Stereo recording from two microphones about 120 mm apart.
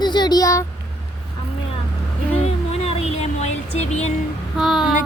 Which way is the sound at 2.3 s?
60° left (ahead or behind).